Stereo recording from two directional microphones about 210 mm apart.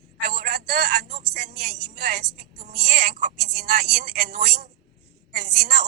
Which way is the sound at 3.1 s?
50° right (ahead or behind).